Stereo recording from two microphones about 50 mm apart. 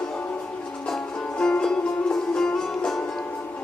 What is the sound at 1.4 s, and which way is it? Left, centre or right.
Music, centre.